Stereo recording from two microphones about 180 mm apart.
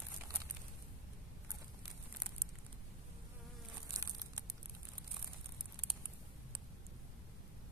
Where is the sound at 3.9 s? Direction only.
20° right (ahead or behind).